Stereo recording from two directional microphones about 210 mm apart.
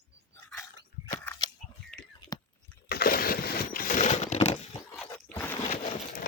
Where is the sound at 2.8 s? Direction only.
45° left (ahead or behind); by 4.6 s 30° left (ahead or behind).